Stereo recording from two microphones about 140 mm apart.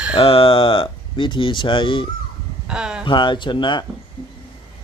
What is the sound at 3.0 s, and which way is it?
Speech, 35° left (ahead or behind).